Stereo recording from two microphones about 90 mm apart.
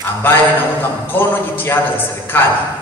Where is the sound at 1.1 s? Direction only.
25° left (ahead or behind).